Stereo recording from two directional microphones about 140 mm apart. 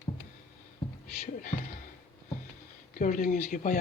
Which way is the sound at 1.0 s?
70° left (ahead or behind).